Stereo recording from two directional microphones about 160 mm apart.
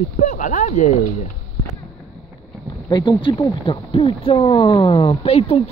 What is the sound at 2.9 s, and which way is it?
Speech, 30° left (ahead or behind).